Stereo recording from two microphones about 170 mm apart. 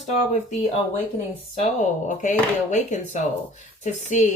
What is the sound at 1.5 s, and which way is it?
Speech, 45° left (ahead or behind).